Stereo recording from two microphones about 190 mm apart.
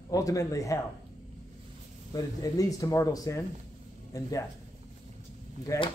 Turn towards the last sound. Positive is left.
turn(degrees=25)  # may be behind; listen again after turning